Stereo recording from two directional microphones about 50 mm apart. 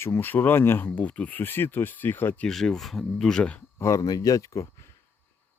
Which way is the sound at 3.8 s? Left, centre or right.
Left.